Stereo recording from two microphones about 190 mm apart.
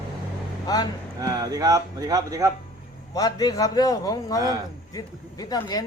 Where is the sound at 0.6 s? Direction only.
20° left (ahead or behind).